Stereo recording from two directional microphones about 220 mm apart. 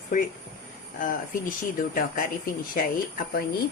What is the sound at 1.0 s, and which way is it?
A woman's voice, 40° left (ahead or behind).